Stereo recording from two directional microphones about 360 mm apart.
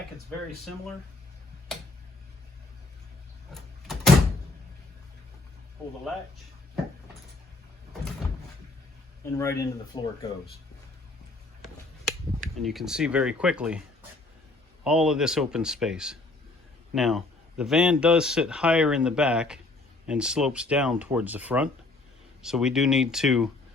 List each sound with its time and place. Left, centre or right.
3.5 s vehicle: centre
9.2 s speech: centre
12.4 s a man's voice: centre
14.8 s a man's voice: centre